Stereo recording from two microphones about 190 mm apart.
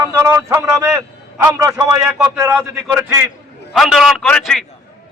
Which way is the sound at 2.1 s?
5° right (ahead or behind).